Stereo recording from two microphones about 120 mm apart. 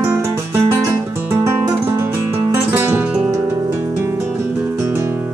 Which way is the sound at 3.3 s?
25° right (ahead or behind).